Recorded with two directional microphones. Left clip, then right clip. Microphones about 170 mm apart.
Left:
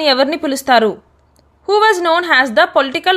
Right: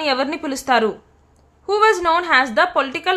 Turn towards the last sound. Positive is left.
turn(degrees=25)  # may be behind; listen again after turning